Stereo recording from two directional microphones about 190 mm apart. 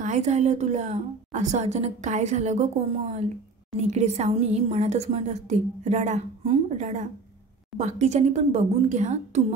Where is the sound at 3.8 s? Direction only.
35° right (ahead or behind).